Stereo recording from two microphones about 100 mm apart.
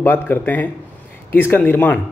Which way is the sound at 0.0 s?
20° left (ahead or behind).